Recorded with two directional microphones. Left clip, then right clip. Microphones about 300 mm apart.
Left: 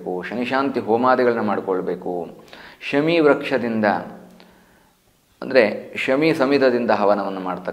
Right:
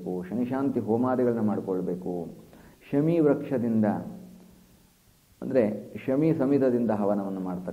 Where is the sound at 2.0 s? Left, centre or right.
Left.